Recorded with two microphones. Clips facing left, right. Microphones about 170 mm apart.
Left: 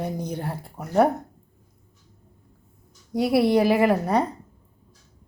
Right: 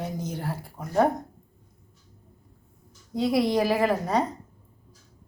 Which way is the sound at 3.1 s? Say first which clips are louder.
Left 4 dB; 10° left (ahead or behind).